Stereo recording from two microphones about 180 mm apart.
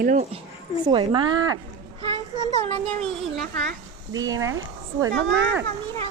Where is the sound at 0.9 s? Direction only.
25° right (ahead or behind).